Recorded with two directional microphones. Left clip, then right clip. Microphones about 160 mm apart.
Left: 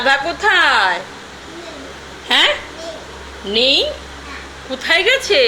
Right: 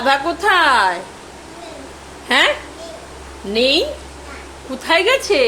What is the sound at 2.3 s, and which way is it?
Speech, 25° right (ahead or behind).